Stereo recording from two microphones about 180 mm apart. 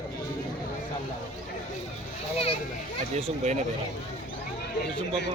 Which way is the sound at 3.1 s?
35° right (ahead or behind).